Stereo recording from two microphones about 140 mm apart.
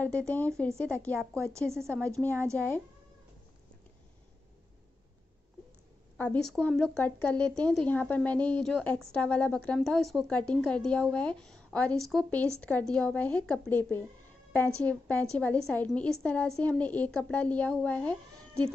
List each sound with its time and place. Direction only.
0.0 s a woman's voice: 10° left (ahead or behind)
0.7 s a woman's voice: 20° right (ahead or behind)
6.1 s a woman's voice: 10° left (ahead or behind)